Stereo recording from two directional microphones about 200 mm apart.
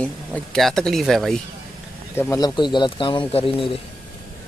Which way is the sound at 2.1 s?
15° left (ahead or behind).